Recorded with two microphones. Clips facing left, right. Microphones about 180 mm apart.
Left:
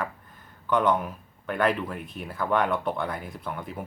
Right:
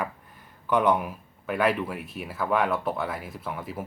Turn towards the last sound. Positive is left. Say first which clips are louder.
# right 1 dB
turn(degrees=-5)  # may be behind; listen again after turning